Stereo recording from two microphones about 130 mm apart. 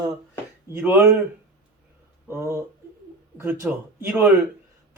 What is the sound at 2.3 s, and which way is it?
Speech, 20° right (ahead or behind).